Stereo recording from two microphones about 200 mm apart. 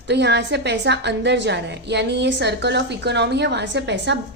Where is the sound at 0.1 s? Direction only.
60° right (ahead or behind).